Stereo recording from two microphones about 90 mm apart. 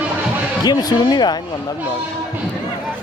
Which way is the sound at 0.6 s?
50° left (ahead or behind).